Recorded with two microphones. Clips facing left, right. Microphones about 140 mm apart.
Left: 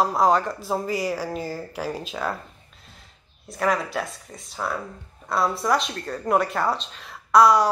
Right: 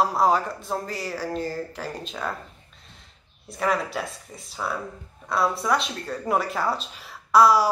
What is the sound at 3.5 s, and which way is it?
Speech, centre (ahead or behind).